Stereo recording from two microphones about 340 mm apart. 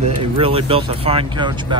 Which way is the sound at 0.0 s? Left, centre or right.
Centre.